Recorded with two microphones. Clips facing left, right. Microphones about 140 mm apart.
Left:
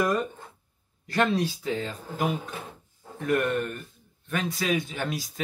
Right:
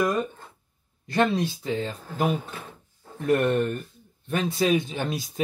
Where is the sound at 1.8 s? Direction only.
25° right (ahead or behind).